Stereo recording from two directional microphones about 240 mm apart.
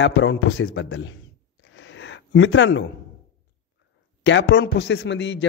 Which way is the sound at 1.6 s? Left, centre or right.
Left.